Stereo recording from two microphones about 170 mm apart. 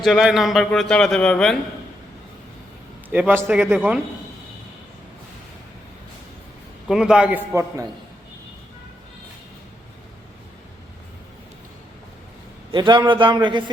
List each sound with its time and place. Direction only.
0.0 s a man's voice: centre (ahead or behind)
3.1 s a man's voice: 10° right (ahead or behind)
6.8 s a man's voice: 5° right (ahead or behind)
12.7 s a man's voice: 25° right (ahead or behind)